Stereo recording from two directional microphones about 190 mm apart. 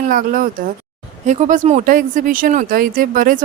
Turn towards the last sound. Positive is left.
turn(degrees=-45)  # may be behind; listen again after turning